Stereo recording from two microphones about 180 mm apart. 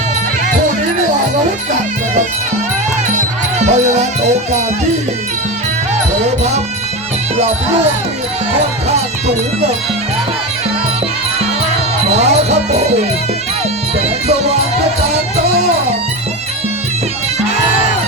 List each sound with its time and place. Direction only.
3.6 s speech: 40° right (ahead or behind)
9.2 s speech: 35° right (ahead or behind)
12.0 s speech: 35° right (ahead or behind)
14.3 s speech: 35° right (ahead or behind)